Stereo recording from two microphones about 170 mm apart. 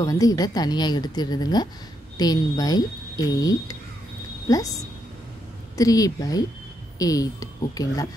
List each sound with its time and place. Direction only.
0.0 s speech: 20° left (ahead or behind)
5.8 s speech: 20° left (ahead or behind)